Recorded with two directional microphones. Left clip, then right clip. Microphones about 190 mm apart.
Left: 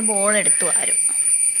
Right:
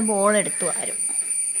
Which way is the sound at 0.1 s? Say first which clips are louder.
Even; 25° right (ahead or behind).